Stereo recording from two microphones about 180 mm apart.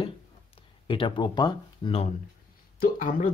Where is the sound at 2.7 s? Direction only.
50° left (ahead or behind).